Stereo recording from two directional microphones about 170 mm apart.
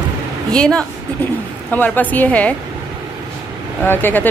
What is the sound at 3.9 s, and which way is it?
Speech, 10° left (ahead or behind).